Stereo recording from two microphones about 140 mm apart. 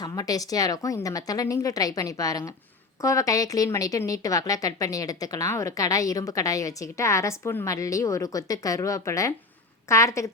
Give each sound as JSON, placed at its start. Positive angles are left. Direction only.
{"t": 0.0, "sound": "speech", "side_deg": 25}